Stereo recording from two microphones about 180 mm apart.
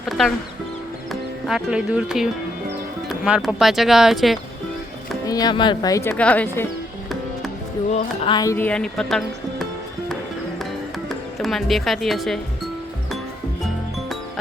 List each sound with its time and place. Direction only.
0.0 s speech: centre (ahead or behind)
1.5 s speech: 5° right (ahead or behind)
5.2 s speech: 20° left (ahead or behind)
7.9 s speech: 35° left (ahead or behind)
8.5 s speech: 5° left (ahead or behind)
11.1 s speech: centre (ahead or behind)